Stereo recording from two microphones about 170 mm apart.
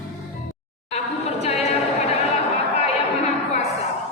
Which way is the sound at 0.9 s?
35° left (ahead or behind).